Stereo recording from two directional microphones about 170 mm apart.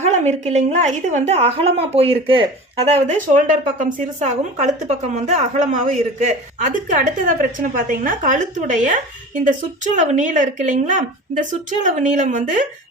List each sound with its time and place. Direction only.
0.0 s a woman's voice: 40° right (ahead or behind)